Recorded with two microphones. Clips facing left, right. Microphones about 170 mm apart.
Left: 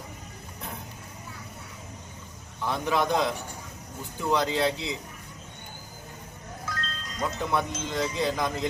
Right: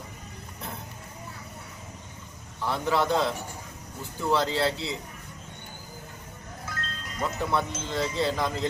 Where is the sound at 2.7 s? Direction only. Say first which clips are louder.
Even; 15° left (ahead or behind).